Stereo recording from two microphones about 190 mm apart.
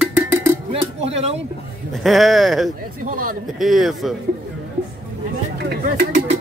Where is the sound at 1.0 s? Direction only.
30° right (ahead or behind).